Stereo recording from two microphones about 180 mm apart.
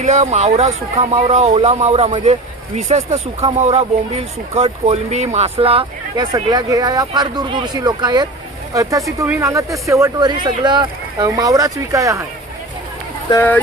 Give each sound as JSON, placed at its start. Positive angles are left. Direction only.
{"t": 0.0, "sound": "speech", "side_deg": -40}
{"t": 6.3, "sound": "speech", "side_deg": -20}
{"t": 13.3, "sound": "speech", "side_deg": 10}